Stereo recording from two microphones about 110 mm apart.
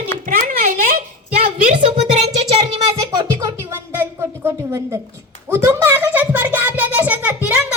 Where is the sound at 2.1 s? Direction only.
80° right.